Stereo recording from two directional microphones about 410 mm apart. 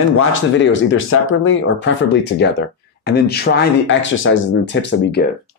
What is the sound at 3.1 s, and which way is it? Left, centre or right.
Speech, left.